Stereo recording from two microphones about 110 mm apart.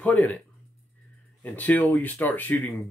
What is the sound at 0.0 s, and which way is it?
Speech, 15° left (ahead or behind).